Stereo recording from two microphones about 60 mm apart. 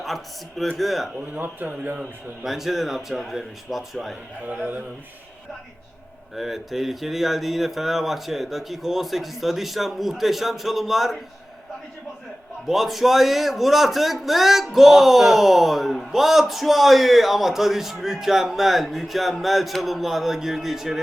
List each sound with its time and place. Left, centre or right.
0.8 s a man's voice: centre
1.3 s speech: right
2.0 s a man's voice: centre
4.4 s speech: right
6.3 s a man's voice: centre
12.6 s a man's voice: centre